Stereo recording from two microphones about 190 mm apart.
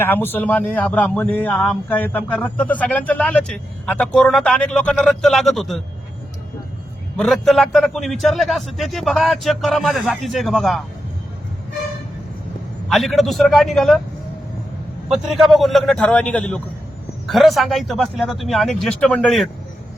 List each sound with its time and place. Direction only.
0.0 s a man's voice: 10° left (ahead or behind)
7.2 s a man's voice: centre (ahead or behind)
12.9 s a man's voice: centre (ahead or behind)
15.1 s a man's voice: centre (ahead or behind)